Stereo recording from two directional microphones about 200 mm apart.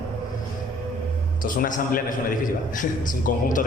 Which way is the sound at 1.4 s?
45° left (ahead or behind).